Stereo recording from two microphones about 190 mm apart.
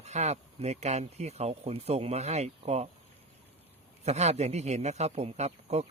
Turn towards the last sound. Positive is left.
turn(degrees=-35)  # may be behind; listen again after turning